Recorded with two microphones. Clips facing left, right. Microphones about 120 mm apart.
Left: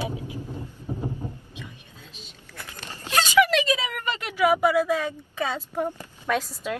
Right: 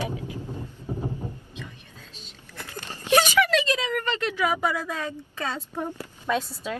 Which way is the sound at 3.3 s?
10° left (ahead or behind).